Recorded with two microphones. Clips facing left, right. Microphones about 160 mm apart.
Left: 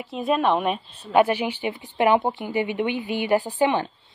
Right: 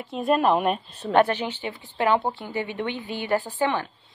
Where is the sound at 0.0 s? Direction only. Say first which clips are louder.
Right 1 dB; centre (ahead or behind).